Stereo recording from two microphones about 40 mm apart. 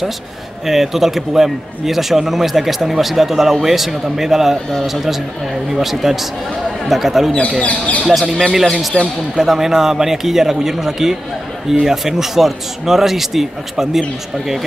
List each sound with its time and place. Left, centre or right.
0.7 s a man's voice: centre
7.6 s speech: left
8.1 s speech: centre
9.0 s speech: left
9.4 s a man's voice: centre